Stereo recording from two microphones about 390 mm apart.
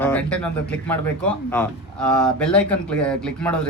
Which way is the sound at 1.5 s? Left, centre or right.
Centre.